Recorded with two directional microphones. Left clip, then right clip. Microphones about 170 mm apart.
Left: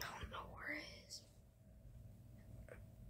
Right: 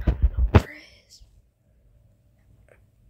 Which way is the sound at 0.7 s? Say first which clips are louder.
Right 5 dB; 30° right (ahead or behind).